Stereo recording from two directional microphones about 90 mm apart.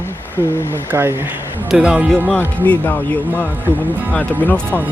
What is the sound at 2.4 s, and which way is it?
Speech, 20° left (ahead or behind).